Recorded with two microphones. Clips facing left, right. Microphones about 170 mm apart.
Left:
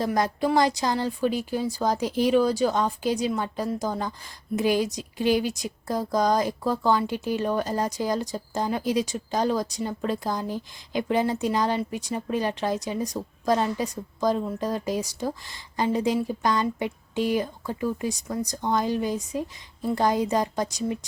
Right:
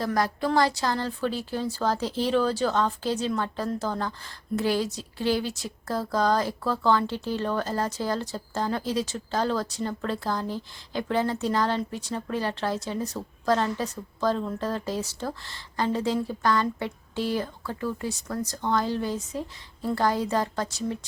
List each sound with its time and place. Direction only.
0.0 s speech: 20° left (ahead or behind)